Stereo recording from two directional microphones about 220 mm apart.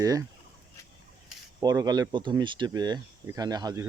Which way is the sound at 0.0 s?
15° right (ahead or behind).